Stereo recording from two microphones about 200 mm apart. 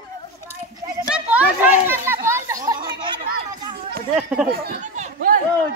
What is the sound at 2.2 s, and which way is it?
Chatter, 15° right (ahead or behind).